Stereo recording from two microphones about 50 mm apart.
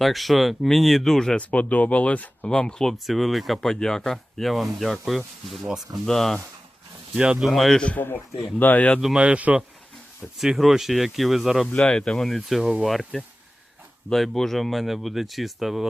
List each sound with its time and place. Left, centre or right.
0.0 s speech: centre
1.4 s speech: left
2.6 s speech: centre
3.1 s speech: centre
3.6 s speech: centre
6.1 s speech: centre
7.2 s speech: right
7.4 s speech: centre
7.9 s speech: left
9.1 s speech: right
10.3 s speech: centre
11.8 s speech: centre
12.1 s speech: centre
14.1 s speech: centre